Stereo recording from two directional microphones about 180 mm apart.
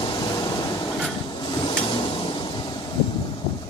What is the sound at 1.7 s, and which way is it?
Printer, 25° left (ahead or behind).